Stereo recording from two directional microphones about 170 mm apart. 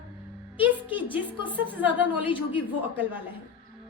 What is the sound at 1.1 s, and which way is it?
A woman's voice, 10° right (ahead or behind).